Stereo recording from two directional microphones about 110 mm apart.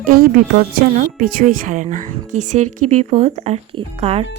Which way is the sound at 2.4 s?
90° right.